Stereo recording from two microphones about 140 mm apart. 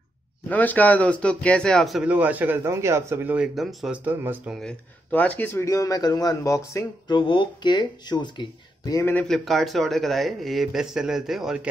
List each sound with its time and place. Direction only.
0.5 s speech: 10° left (ahead or behind)
2.1 s speech: 10° right (ahead or behind)
3.3 s speech: centre (ahead or behind)
4.5 s speech: 5° left (ahead or behind); by 6.9 s 20° left (ahead or behind)
7.1 s speech: 35° left (ahead or behind)
9.3 s speech: centre (ahead or behind)